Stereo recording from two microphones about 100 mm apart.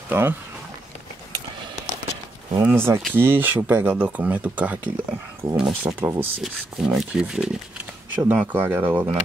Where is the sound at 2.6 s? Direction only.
20° right (ahead or behind).